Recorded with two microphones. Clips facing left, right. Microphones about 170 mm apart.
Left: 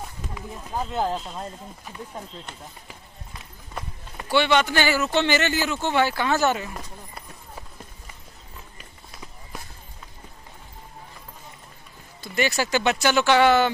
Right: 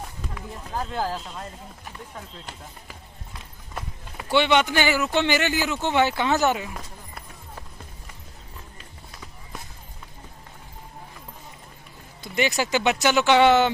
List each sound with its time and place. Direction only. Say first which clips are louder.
0.3 s speech: left 1 dB; 10° left (ahead or behind)
0.9 s speech: left 4 dB; 25° left (ahead or behind)
4.3 s speech: even; 20° right (ahead or behind)
6.7 s run: left 1 dB; centre (ahead or behind)
12.2 s speech: even; 15° right (ahead or behind)